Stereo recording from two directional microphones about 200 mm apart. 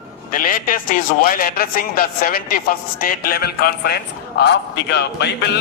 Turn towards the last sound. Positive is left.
turn(degrees=55)  # may be behind; listen again after turning